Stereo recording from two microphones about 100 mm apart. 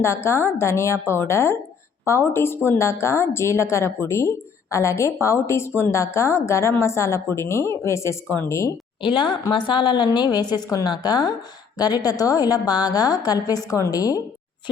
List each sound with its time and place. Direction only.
0.0 s a woman's voice: 25° left (ahead or behind)
9.0 s a woman's voice: 55° left (ahead or behind); by 14.2 s 35° left (ahead or behind)